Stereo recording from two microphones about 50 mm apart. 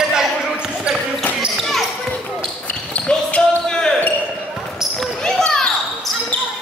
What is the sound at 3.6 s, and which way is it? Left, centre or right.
Basketball bounce, centre.